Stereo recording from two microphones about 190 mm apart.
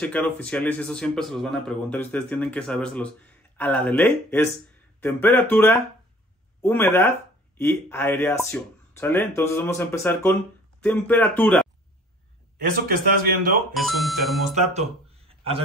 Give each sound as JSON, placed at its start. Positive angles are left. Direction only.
{"t": 0.0, "sound": "speech", "side_deg": 5}
{"t": 12.8, "sound": "speech", "side_deg": -50}
{"t": 13.7, "sound": "speech", "side_deg": 0}
{"t": 14.5, "sound": "speech", "side_deg": -35}